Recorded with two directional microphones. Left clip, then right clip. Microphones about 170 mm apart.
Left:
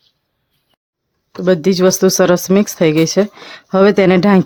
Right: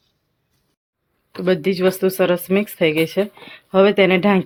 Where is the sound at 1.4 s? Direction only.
55° left (ahead or behind).